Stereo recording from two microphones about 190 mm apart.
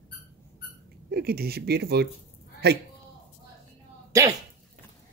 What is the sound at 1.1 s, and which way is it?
Mantra, 55° right (ahead or behind).